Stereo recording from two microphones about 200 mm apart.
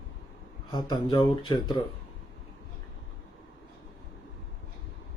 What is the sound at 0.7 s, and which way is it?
Speech, 20° left (ahead or behind).